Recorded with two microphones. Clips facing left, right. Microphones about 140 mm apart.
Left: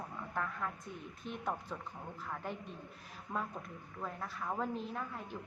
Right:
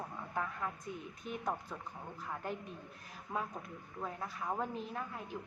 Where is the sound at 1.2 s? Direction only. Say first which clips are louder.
Right 1 dB; 5° right (ahead or behind).